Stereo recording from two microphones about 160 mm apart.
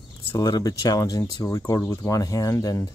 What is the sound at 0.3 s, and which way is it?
Speech, 25° left (ahead or behind).